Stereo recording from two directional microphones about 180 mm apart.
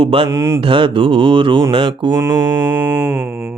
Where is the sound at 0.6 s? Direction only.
30° right (ahead or behind).